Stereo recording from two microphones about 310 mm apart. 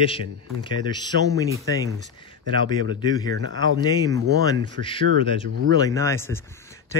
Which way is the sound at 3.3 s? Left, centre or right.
Right.